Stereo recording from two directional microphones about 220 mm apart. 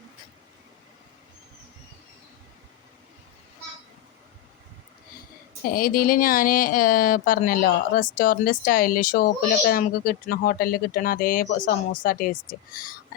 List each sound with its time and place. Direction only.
5.7 s speech: 40° left (ahead or behind)